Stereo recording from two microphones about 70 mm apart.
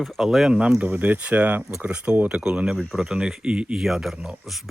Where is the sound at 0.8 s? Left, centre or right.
Right.